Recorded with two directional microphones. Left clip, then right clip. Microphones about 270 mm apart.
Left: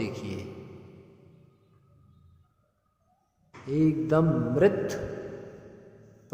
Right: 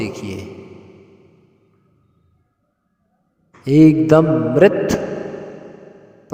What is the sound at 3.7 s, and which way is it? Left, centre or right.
A man's voice, right.